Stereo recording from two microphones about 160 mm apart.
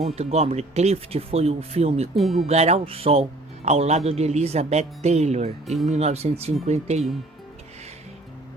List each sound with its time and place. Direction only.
0.2 s speech: 40° right (ahead or behind)
2.1 s speech: centre (ahead or behind)
2.5 s speech: 40° right (ahead or behind)
5.6 s speech: centre (ahead or behind)
5.9 s speech: 40° right (ahead or behind)